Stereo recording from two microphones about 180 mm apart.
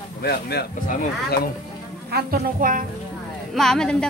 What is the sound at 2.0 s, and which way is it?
Speech, 60° right (ahead or behind).